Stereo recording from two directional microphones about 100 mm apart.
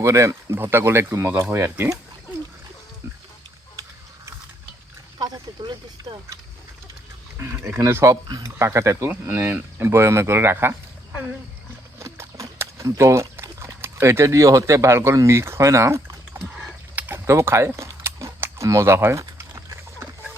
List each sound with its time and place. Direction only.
0.0 s speech: 30° right (ahead or behind)
5.2 s speech: 50° right (ahead or behind)
7.6 s speech: 25° right (ahead or behind)
11.9 s speech: 30° right (ahead or behind)
16.9 s a sound: 15° right (ahead or behind)
17.2 s speech: 30° right (ahead or behind)